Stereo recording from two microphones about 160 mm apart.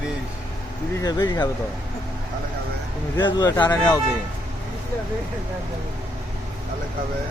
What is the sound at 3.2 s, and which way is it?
Speech, 25° left (ahead or behind).